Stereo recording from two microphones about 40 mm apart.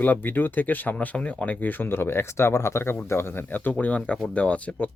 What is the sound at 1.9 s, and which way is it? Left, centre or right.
Speech, left.